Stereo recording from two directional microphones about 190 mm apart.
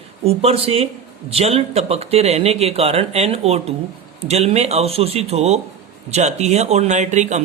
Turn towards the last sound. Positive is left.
turn(degrees=-40)  # may be behind; listen again after turning